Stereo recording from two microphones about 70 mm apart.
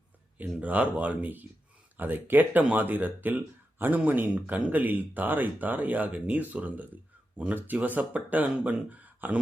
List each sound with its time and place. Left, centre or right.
0.3 s speech: right